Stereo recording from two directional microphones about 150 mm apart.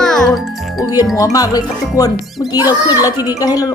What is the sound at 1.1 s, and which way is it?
Speech, 20° left (ahead or behind).